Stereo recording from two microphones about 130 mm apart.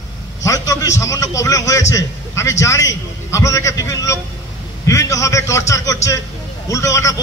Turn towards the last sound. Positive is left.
turn(degrees=25)  # may be behind; listen again after turning